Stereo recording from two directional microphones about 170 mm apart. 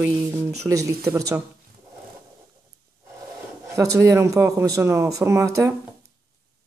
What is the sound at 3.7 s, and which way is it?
Speech, 20° right (ahead or behind).